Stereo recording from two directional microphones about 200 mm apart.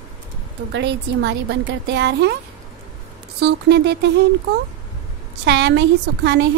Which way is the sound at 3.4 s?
60° right (ahead or behind).